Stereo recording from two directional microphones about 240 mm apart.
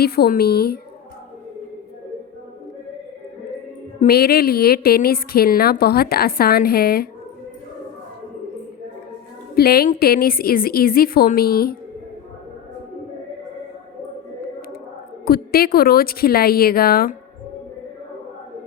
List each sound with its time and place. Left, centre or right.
0.0 s a woman's voice: left
4.0 s a woman's voice: left
9.6 s a woman's voice: left
15.2 s a woman's voice: left